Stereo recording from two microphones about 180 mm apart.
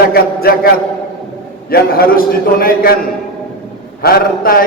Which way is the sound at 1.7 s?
55° left (ahead or behind).